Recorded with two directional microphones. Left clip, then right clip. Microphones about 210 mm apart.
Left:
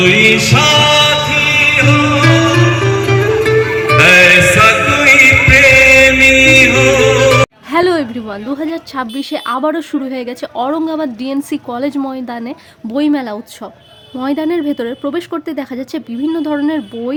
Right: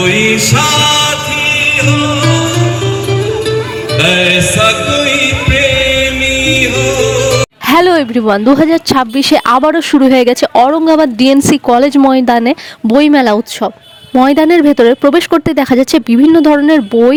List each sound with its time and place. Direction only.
0.0 s music: 35° right (ahead or behind)
3.8 s music: 20° right (ahead or behind)
7.7 s a woman's voice: 50° right (ahead or behind)